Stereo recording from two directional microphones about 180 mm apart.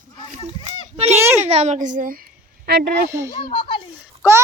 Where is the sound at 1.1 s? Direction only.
15° right (ahead or behind).